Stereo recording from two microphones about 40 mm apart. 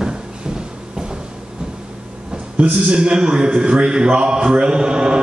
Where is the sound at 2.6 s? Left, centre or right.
Right.